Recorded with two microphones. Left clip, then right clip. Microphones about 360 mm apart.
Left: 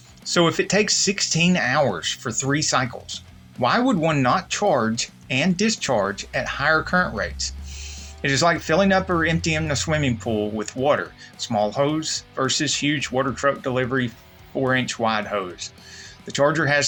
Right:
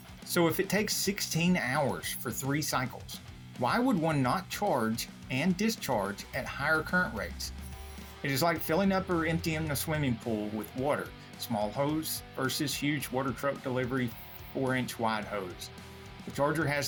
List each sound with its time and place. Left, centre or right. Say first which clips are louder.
0.3 s speech: left 9 dB; right